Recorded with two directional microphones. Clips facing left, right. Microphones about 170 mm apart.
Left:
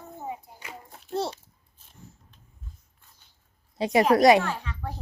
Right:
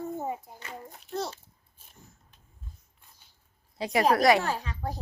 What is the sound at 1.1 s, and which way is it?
Babbling, 30° left (ahead or behind).